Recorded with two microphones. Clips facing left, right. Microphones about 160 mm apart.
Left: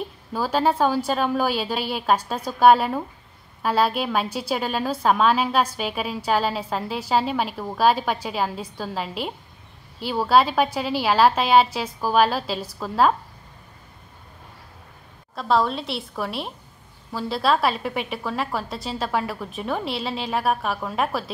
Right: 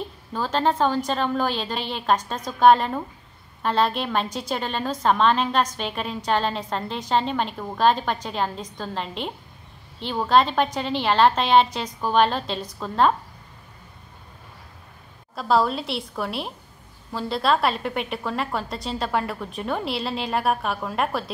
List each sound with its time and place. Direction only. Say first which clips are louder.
0.3 s a woman's voice: left 1 dB; 10° left (ahead or behind)
15.3 s a woman's voice: even; centre (ahead or behind)